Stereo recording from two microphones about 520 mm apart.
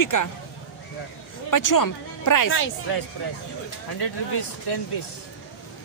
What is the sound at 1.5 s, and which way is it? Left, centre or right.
Speech, left.